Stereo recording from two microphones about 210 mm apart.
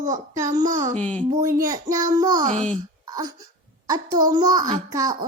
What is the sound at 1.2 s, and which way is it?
A child's voice, 15° right (ahead or behind).